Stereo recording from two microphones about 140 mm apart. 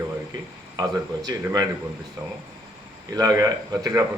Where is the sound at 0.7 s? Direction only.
25° right (ahead or behind).